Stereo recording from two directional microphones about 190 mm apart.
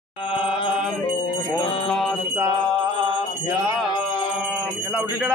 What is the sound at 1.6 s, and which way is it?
Music, 30° left (ahead or behind).